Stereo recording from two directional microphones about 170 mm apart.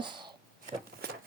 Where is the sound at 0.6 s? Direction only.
60° right (ahead or behind).